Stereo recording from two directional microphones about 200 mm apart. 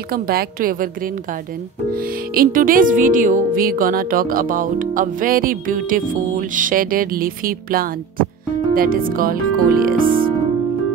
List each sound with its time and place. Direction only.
0.1 s music: 50° right (ahead or behind)